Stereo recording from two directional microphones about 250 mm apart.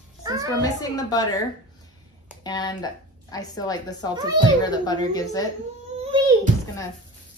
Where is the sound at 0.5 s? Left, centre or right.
Centre.